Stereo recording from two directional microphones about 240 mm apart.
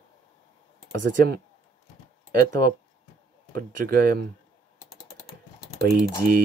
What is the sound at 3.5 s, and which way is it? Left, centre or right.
Speech, right.